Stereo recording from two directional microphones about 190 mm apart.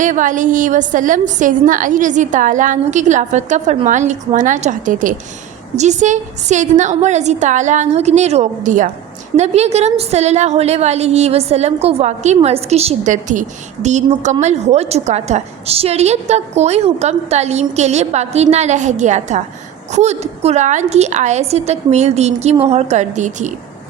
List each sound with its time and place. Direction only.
0.0 s a woman's voice: 40° right (ahead or behind)